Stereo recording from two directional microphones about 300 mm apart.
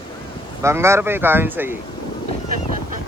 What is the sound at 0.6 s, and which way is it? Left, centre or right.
Speech, centre.